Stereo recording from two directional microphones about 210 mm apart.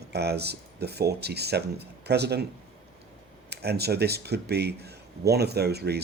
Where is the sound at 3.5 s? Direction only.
50° right (ahead or behind).